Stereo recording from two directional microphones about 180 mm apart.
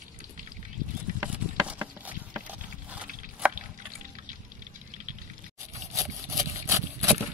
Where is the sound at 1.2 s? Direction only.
10° right (ahead or behind).